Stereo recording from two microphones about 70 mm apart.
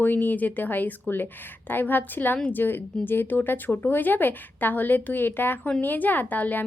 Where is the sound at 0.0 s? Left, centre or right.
Left.